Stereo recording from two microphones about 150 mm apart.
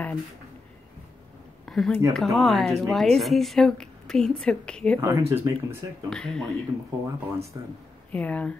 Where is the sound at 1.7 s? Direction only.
Centre (ahead or behind).